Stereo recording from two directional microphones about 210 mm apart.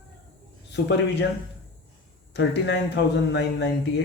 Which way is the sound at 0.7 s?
55° left (ahead or behind).